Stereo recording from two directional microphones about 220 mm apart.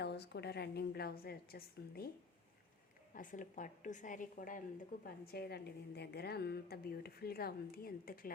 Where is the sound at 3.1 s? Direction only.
35° left (ahead or behind).